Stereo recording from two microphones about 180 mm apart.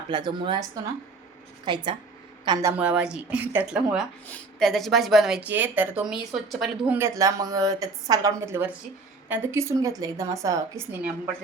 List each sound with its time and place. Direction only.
0.1 s speech: 25° right (ahead or behind)
1.6 s speech: 25° right (ahead or behind)